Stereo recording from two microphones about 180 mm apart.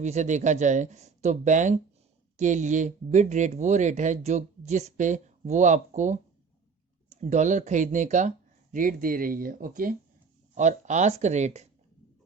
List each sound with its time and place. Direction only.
0.0 s speech: 40° right (ahead or behind)